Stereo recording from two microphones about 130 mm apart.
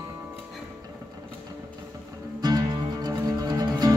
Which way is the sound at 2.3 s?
30° right (ahead or behind).